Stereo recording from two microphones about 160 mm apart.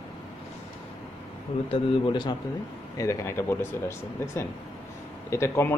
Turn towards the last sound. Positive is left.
turn(degrees=15)  # may be behind; listen again after turning